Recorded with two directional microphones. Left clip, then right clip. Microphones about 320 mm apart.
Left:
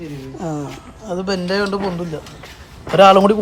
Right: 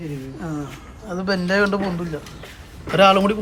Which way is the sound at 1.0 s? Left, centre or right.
Centre.